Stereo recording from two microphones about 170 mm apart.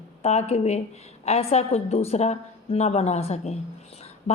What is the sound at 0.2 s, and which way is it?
Speech, 40° left (ahead or behind).